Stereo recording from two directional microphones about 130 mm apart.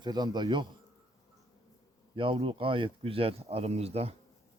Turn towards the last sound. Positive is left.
turn(degrees=-50)  # may be behind; listen again after turning